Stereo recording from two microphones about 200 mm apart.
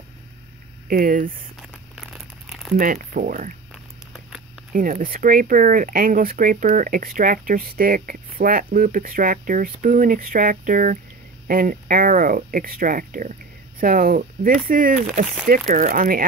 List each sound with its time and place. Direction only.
0.8 s speech: 45° right (ahead or behind)
1.6 s crumpling: centre (ahead or behind)
2.8 s speech: 45° right (ahead or behind)
4.7 s speech: 45° right (ahead or behind)